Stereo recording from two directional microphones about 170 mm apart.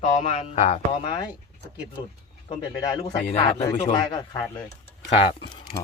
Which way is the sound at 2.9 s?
35° left (ahead or behind).